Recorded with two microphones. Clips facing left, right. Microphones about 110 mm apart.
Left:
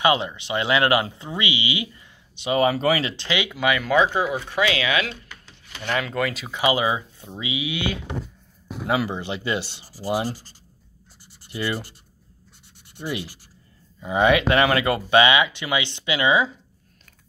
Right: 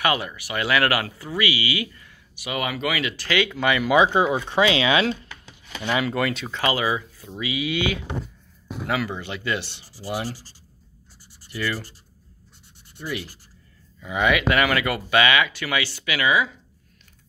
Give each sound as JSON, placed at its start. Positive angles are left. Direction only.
{"t": 0.0, "sound": "speech", "side_deg": 25}
{"t": 3.3, "sound": "speech", "side_deg": 20}
{"t": 3.5, "sound": "speech", "side_deg": 5}
{"t": 3.8, "sound": "speech", "side_deg": -15}
{"t": 5.9, "sound": "speech", "side_deg": -5}
{"t": 6.6, "sound": "speech", "side_deg": 20}
{"t": 8.8, "sound": "speech", "side_deg": 25}
{"t": 11.4, "sound": "speech", "side_deg": 20}
{"t": 12.9, "sound": "speech", "side_deg": 20}